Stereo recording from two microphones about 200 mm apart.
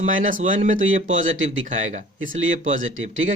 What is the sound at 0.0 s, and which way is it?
Speech, 40° right (ahead or behind).